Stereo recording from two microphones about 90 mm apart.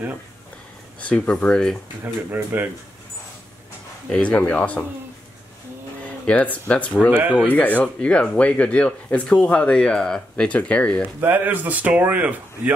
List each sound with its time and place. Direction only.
1.0 s speech: 15° left (ahead or behind)
2.3 s speech: 20° right (ahead or behind)
4.1 s speech: 15° left (ahead or behind)
6.0 s speech: 15° left (ahead or behind)
7.1 s speech: 15° right (ahead or behind)
7.3 s speech: 15° left (ahead or behind)
11.1 s speech: 20° right (ahead or behind)